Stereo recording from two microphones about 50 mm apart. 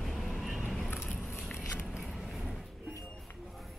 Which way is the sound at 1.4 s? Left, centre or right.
Centre.